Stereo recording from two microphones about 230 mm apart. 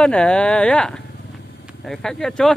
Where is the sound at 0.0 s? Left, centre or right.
Centre.